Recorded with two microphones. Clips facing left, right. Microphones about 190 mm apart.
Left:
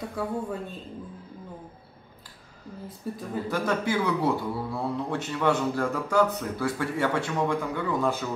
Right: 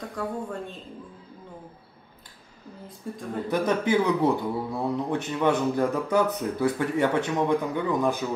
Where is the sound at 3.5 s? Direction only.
20° right (ahead or behind).